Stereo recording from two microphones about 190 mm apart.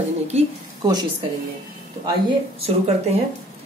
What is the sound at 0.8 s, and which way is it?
Speech, 20° right (ahead or behind).